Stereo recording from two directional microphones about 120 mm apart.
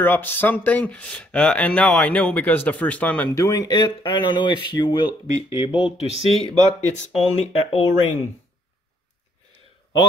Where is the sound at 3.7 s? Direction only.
40° left (ahead or behind).